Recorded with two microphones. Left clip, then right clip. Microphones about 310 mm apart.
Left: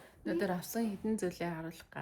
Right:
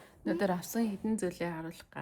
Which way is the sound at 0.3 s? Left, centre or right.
Centre.